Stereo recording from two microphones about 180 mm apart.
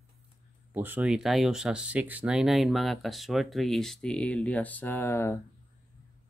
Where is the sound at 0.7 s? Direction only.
10° right (ahead or behind); by 5.4 s 15° left (ahead or behind).